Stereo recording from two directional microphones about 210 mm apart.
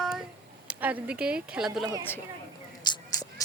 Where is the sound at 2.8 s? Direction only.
20° left (ahead or behind).